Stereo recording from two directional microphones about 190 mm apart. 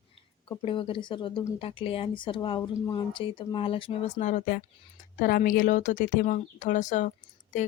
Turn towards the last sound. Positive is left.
turn(degrees=40)  # may be behind; listen again after turning